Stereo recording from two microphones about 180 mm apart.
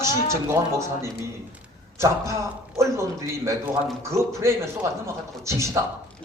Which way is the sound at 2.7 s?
15° right (ahead or behind).